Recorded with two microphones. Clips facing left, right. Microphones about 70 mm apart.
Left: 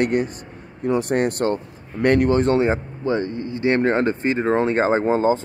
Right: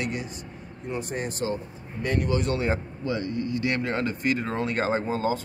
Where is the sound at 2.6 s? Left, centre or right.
Left.